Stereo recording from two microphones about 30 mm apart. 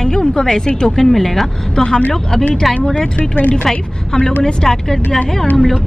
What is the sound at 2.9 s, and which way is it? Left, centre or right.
Speech, left.